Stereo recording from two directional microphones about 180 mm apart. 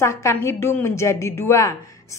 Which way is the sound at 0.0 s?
15° left (ahead or behind).